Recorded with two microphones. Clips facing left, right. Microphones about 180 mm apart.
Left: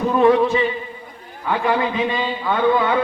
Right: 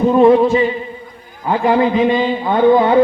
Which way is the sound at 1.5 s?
30° right (ahead or behind).